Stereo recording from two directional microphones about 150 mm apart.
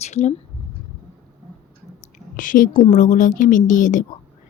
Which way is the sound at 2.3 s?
60° left (ahead or behind).